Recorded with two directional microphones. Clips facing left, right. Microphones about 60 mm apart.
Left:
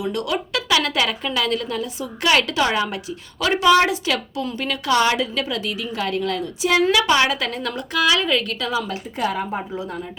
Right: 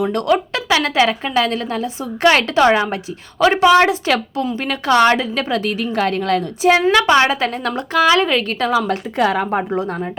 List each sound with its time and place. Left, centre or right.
0.0 s a woman's voice: right
8.9 s a woman's voice: right